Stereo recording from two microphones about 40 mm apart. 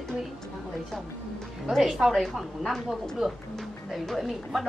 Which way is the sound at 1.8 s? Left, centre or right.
Centre.